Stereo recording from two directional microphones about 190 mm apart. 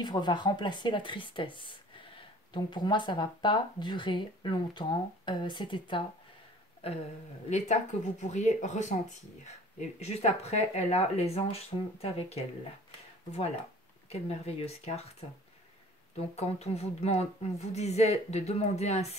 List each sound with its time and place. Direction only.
0.0 s speech: 25° left (ahead or behind)
14.0 s speech: 30° left (ahead or behind)
16.3 s speech: 35° left (ahead or behind)